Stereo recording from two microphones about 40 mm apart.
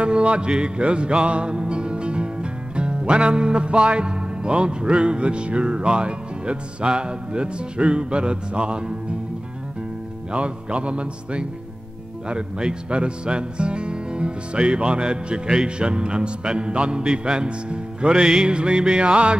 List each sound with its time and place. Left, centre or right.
0.0 s music: right
2.7 s speech: right
10.3 s speech: right